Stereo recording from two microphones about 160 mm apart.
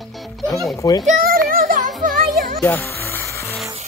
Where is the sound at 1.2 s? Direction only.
60° right (ahead or behind).